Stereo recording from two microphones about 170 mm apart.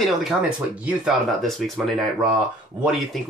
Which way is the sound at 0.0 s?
5° right (ahead or behind).